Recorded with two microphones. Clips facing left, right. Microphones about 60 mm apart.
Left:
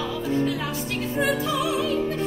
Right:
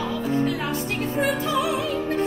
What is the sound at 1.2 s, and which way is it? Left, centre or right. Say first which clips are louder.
Music: even; right.